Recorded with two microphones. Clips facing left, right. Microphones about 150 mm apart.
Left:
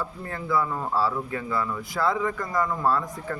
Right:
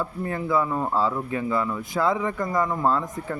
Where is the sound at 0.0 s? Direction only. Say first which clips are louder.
Right 5 dB; 20° right (ahead or behind).